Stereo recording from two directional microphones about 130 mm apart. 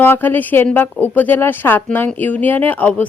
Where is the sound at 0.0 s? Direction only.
15° left (ahead or behind).